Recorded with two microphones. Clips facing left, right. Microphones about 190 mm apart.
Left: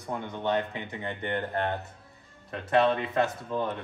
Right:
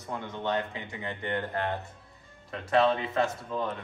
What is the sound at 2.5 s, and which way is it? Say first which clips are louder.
A man's voice: left 1 dB; centre (ahead or behind).